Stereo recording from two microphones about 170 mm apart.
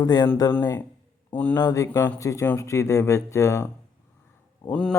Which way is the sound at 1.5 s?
20° left (ahead or behind).